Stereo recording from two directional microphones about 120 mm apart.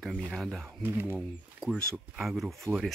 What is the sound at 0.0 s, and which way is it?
Speech, centre (ahead or behind).